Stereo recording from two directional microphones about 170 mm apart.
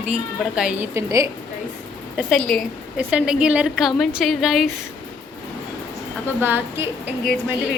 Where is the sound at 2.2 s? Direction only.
Centre (ahead or behind).